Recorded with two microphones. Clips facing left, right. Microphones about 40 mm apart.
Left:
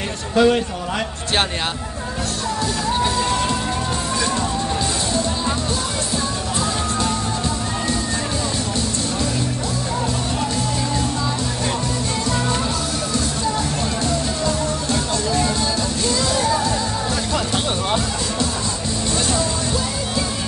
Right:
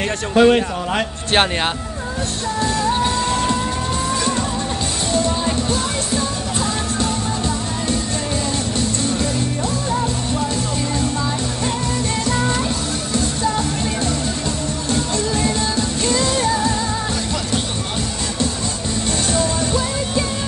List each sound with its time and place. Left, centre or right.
0.3 s a man's voice: right
14.9 s music: right
19.3 s music: right